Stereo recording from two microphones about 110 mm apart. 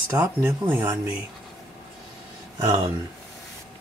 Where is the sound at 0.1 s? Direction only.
25° right (ahead or behind).